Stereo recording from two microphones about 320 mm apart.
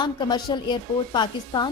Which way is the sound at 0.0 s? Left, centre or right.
Centre.